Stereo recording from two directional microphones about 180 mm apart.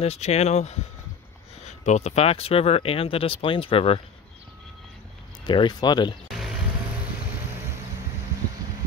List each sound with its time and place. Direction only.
0.0 s speech: 35° left (ahead or behind)
5.4 s speech: 25° left (ahead or behind)